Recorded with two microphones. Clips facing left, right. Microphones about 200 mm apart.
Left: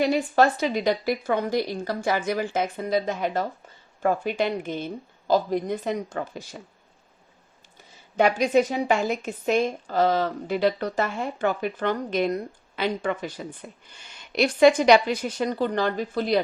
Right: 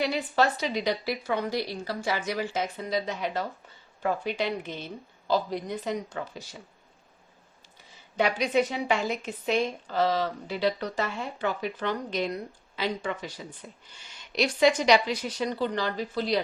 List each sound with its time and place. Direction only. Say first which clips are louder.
0.0 s speech: left 5 dB; 45° left (ahead or behind)
8.1 s speech: left 5 dB; 50° left (ahead or behind)